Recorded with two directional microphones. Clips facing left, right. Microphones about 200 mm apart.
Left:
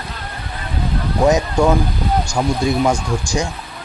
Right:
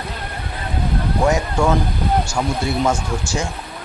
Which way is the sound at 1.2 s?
20° left (ahead or behind).